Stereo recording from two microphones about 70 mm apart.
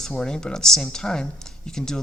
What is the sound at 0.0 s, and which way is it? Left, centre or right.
Speech, centre.